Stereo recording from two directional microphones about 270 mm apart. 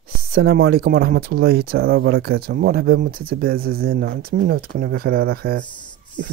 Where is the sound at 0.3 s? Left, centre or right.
Right.